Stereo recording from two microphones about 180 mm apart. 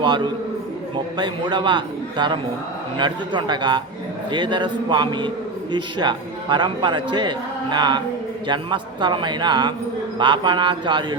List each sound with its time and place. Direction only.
1.1 s a man's voice: 25° right (ahead or behind)